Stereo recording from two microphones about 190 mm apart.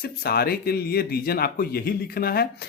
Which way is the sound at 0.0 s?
55° left (ahead or behind).